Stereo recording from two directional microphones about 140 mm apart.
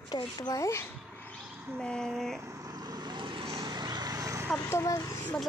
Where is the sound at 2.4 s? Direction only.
25° right (ahead or behind); by 3.6 s 40° right (ahead or behind).